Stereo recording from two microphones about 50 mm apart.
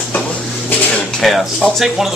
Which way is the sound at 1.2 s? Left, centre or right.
Centre.